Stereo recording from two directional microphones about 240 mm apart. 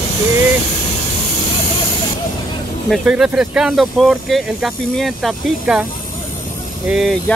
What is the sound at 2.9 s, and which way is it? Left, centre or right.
Speech, centre.